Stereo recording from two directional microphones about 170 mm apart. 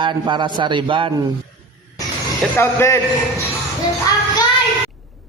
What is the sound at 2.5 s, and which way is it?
Speech, 15° left (ahead or behind).